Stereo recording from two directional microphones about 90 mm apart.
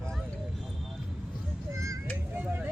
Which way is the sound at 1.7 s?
35° right (ahead or behind).